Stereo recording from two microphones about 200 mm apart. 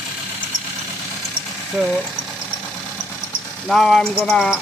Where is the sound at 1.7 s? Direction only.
5° left (ahead or behind).